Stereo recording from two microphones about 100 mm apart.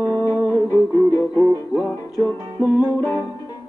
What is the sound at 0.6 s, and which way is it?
Music, 30° left (ahead or behind).